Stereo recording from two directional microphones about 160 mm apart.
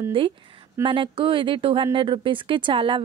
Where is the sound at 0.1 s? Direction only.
30° right (ahead or behind).